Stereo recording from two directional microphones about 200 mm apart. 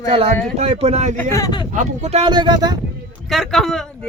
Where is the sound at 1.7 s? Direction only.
35° right (ahead or behind); by 2.7 s 20° right (ahead or behind).